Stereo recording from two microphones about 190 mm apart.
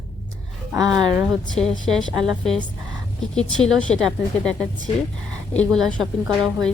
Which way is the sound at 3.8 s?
5° left (ahead or behind).